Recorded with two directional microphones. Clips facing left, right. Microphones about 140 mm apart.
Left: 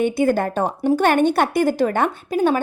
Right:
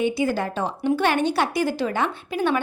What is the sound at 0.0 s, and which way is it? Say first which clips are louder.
A woman's voice: left 4 dB; 50° left (ahead or behind).